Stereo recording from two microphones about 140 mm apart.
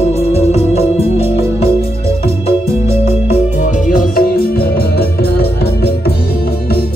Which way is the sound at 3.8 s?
85° left.